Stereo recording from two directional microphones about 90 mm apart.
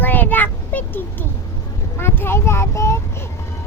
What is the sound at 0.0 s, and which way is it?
Child singing, 20° left (ahead or behind).